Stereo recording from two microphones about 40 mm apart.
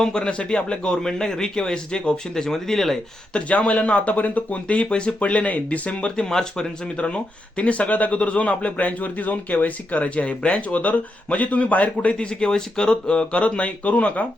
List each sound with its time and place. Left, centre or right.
0.0 s a man's voice: left
3.7 s speech: left
6.1 s a man's voice: centre
6.9 s speech: left
12.1 s speech: left